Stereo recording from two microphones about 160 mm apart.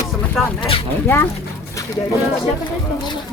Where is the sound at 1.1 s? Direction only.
10° left (ahead or behind).